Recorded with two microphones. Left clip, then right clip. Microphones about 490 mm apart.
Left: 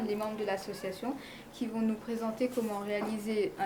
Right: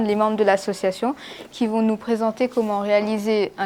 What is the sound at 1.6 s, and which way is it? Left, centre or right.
A woman's voice, right.